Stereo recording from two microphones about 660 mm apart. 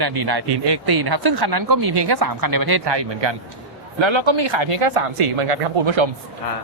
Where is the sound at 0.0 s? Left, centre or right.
Right.